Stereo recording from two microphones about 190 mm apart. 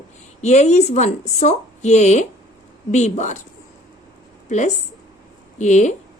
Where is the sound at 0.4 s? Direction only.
35° left (ahead or behind).